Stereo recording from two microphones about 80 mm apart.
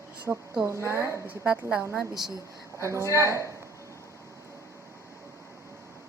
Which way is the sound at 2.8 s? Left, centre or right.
Right.